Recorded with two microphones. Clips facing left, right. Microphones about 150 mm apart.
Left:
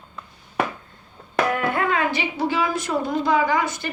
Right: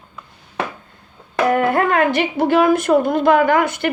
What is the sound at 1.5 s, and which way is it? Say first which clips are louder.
Speech: right 9 dB; 45° right (ahead or behind).